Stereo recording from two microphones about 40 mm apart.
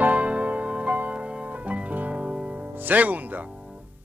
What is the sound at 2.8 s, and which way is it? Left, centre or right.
Speech, right.